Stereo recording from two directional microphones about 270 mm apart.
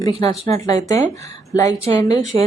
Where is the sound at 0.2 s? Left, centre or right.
Centre.